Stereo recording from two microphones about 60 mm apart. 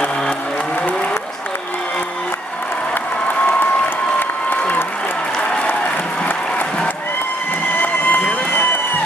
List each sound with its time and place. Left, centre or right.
4.2 s applause: left
7.8 s run: left